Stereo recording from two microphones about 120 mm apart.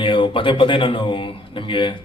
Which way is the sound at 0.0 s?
45° left (ahead or behind).